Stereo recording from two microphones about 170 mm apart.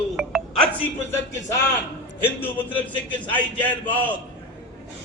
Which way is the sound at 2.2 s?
10° left (ahead or behind).